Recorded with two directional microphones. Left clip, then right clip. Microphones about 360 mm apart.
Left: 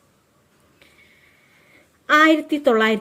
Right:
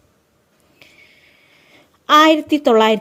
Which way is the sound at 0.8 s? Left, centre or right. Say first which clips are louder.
Right 6 dB; right.